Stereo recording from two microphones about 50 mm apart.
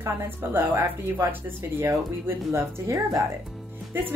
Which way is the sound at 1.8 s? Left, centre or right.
Right.